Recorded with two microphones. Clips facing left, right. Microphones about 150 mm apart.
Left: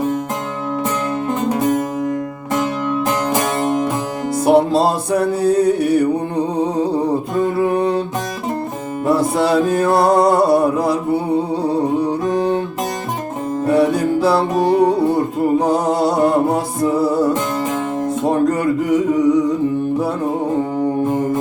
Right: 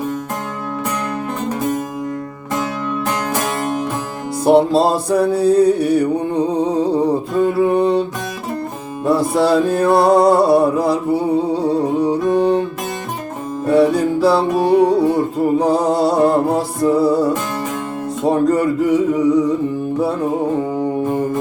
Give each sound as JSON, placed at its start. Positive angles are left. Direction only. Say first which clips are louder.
{"t": 3.2, "sound": "music", "louder": "left 2 dB", "side_deg": 20}
{"t": 4.4, "sound": "music", "louder": "right 1 dB", "side_deg": 0}
{"t": 9.0, "sound": "music", "louder": "right 1 dB", "side_deg": 0}
{"t": 13.7, "sound": "music", "louder": "right 2 dB", "side_deg": 0}